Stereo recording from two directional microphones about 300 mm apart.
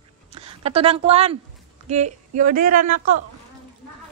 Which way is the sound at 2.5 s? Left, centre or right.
Right.